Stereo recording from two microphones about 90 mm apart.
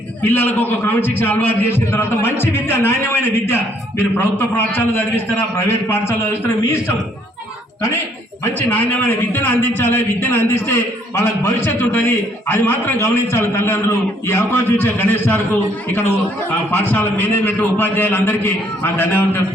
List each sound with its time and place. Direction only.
0.2 s a man's voice: 20° left (ahead or behind)
8.7 s a man's voice: 20° left (ahead or behind)
16.7 s a man's voice: 20° left (ahead or behind)